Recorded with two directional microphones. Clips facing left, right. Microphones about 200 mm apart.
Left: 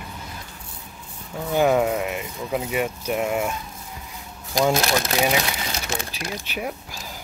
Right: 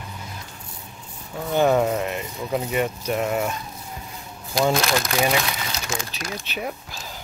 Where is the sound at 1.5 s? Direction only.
5° left (ahead or behind).